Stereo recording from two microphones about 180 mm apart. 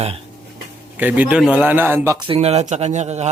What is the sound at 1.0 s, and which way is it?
A man's voice, 10° right (ahead or behind).